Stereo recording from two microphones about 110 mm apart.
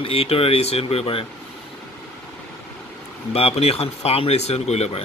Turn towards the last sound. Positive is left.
turn(degrees=75)  # may be behind; listen again after turning